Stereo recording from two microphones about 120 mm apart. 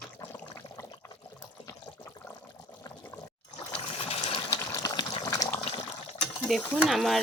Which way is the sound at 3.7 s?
55° left (ahead or behind).